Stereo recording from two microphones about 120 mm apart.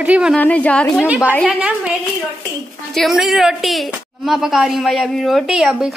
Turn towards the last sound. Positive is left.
turn(degrees=-5)  # may be behind; listen again after turning